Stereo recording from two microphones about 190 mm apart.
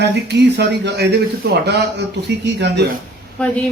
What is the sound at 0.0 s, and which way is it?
Speech, 65° right (ahead or behind).